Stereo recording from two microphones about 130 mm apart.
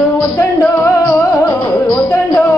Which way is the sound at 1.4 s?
10° left (ahead or behind).